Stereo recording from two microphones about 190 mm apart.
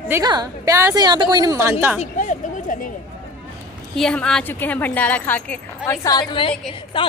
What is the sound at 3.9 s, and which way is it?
A woman's voice, 5° left (ahead or behind).